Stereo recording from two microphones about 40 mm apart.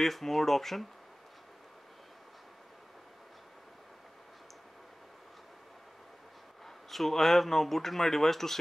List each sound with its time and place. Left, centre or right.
0.0 s speech: centre
6.6 s speech: centre